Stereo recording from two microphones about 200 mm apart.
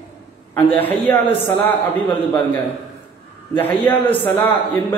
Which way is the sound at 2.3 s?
10° left (ahead or behind).